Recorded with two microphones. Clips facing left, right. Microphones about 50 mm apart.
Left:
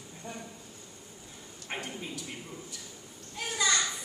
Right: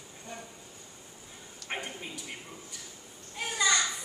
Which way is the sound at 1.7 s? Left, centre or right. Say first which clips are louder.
Even; centre.